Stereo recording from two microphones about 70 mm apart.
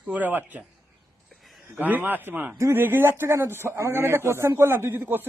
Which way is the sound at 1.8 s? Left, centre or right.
Right.